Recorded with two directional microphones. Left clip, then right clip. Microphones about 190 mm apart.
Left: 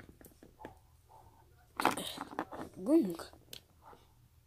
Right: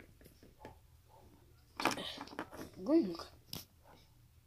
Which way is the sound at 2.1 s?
Centre (ahead or behind).